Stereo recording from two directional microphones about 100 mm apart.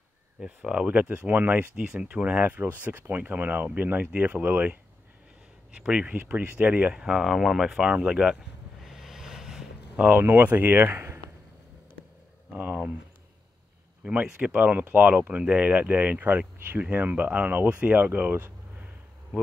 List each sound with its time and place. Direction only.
0.4 s speech: 10° right (ahead or behind)
5.8 s speech: 10° right (ahead or behind)
8.8 s a sound: 5° right (ahead or behind)
10.0 s speech: 20° right (ahead or behind)
12.5 s speech: 15° right (ahead or behind)
14.0 s speech: 10° right (ahead or behind)